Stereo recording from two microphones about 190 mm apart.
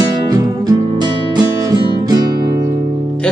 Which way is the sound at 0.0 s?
20° right (ahead or behind).